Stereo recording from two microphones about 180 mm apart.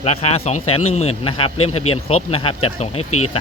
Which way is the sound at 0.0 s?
35° left (ahead or behind).